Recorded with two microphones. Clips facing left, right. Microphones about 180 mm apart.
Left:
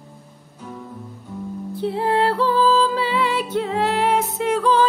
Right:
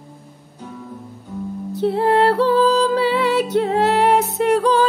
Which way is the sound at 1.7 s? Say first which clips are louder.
Right 5 dB; 75° right (ahead or behind).